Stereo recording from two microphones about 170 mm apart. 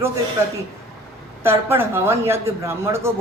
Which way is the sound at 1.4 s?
15° right (ahead or behind).